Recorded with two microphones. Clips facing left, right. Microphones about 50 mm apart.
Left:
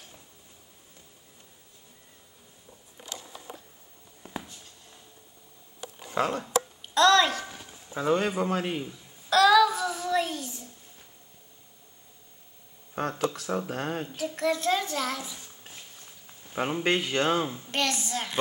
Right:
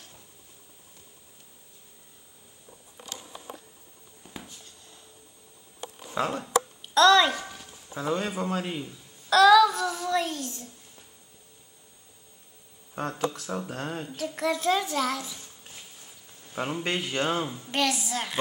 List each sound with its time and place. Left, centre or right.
4.4 s writing: centre
6.2 s a child's voice: centre
7.5 s a sound: centre
8.8 s child singing: centre
12.9 s speech: centre
14.0 s a child's voice: centre
15.1 s a sound: centre
16.5 s speech: centre
17.0 s a child's voice: centre